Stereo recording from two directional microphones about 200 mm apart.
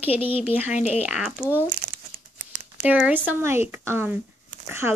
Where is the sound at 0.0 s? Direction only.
10° right (ahead or behind).